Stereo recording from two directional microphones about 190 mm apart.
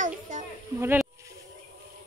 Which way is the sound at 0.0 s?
40° right (ahead or behind).